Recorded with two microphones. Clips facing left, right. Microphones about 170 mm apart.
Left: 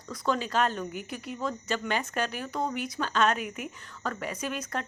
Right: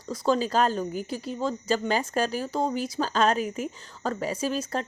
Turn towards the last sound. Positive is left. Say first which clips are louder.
# right 5 dB
turn(degrees=-30)  # may be behind; listen again after turning